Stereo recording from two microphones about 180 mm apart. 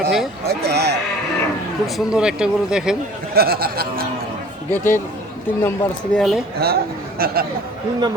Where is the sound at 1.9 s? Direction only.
5° right (ahead or behind).